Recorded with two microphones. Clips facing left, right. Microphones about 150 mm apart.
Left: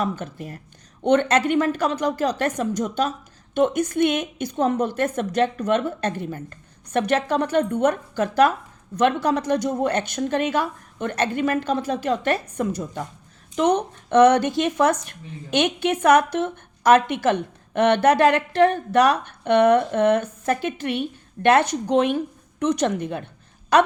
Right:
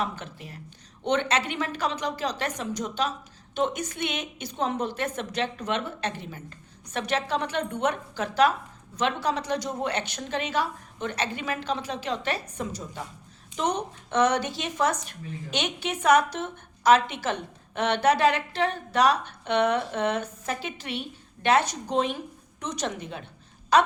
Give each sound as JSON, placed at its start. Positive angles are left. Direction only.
{"t": 0.0, "sound": "a woman's voice", "side_deg": 45}